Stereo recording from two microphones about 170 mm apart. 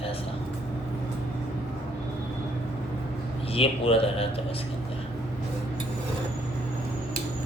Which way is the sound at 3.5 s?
35° left (ahead or behind).